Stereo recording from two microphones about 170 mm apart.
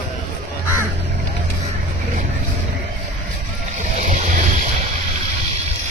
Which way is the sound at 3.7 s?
45° right (ahead or behind).